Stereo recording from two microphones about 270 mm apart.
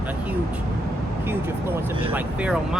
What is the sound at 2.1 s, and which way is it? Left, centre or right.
Speech, centre.